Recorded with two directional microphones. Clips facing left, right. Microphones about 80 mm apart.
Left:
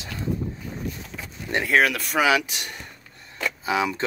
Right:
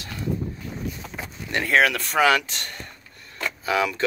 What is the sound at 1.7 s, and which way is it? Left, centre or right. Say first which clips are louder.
Speech: right 1 dB; centre.